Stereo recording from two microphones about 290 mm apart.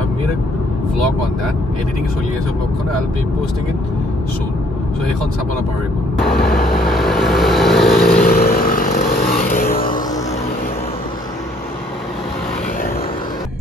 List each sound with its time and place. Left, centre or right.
6.4 s vehicle: centre
8.3 s vehicle: left